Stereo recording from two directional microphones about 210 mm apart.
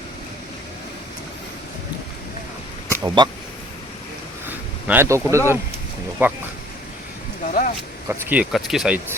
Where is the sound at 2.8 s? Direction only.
15° right (ahead or behind).